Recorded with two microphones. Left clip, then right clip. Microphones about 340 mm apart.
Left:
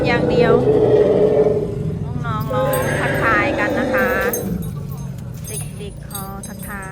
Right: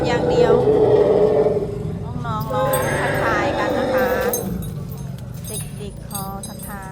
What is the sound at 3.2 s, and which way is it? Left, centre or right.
Vehicle, centre.